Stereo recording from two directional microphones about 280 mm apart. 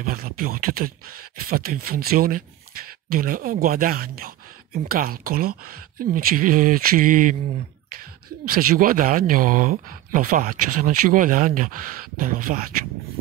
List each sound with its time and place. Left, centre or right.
0.0 s speech: right
8.5 s speech: right